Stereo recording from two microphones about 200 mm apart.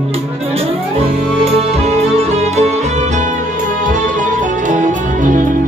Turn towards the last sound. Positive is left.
turn(degrees=-40)  # may be behind; listen again after turning